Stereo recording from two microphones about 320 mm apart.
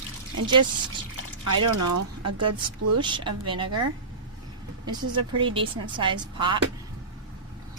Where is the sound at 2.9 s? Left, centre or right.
Centre.